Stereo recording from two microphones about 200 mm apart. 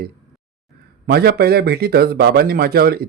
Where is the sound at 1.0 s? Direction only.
50° right (ahead or behind).